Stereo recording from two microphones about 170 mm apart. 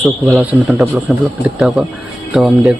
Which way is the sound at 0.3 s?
Centre (ahead or behind).